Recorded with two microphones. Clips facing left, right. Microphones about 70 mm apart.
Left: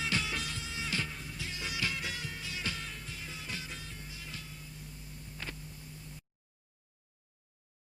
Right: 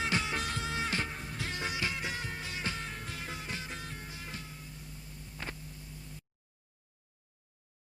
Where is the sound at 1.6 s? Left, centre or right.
Right.